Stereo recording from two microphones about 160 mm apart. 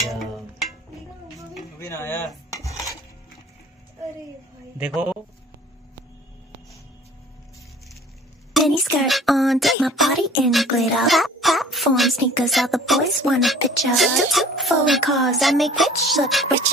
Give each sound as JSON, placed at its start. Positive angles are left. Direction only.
{"t": 0.1, "sound": "music", "side_deg": 0}
{"t": 1.8, "sound": "speech", "side_deg": 15}
{"t": 2.5, "sound": "dishes", "side_deg": 20}
{"t": 4.7, "sound": "speech", "side_deg": -5}
{"t": 8.5, "sound": "speech", "side_deg": 0}